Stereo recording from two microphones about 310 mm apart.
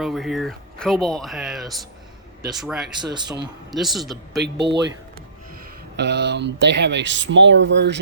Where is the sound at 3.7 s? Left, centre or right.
Centre.